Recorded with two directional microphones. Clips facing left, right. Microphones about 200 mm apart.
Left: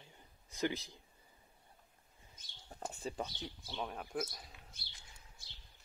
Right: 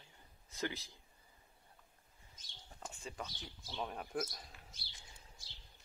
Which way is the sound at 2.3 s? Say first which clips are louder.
Left 5 dB; 40° left (ahead or behind).